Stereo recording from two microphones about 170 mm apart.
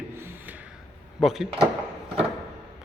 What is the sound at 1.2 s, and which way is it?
Speech, centre (ahead or behind).